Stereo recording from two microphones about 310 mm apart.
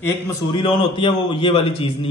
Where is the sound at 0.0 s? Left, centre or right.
Centre.